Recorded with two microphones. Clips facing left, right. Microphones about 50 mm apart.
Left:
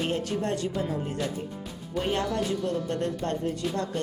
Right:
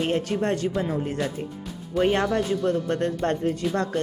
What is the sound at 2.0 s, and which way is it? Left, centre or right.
Speech, right.